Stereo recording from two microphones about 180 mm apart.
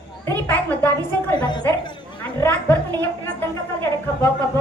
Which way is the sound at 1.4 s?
25° left (ahead or behind).